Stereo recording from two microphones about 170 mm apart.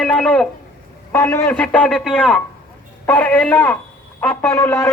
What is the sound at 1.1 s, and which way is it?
Speech, 15° left (ahead or behind).